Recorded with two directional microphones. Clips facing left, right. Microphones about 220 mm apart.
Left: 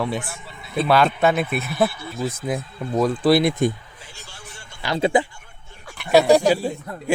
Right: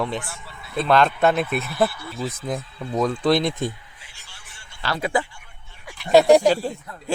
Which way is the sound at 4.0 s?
45° left (ahead or behind).